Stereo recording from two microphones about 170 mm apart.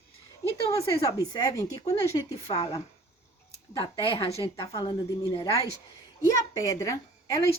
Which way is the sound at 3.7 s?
25° left (ahead or behind).